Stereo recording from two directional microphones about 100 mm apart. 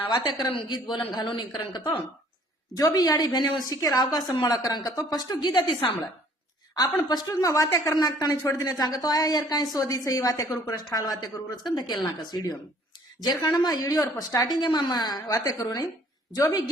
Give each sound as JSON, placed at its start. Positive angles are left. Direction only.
{"t": 0.0, "sound": "a woman's voice", "side_deg": 45}
{"t": 15.3, "sound": "speech", "side_deg": 35}